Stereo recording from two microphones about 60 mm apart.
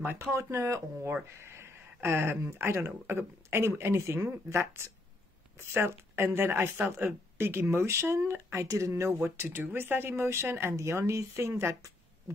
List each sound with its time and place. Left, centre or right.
0.0 s speech: right
0.3 s speech: right
8.6 s speech: right
9.2 s speech: right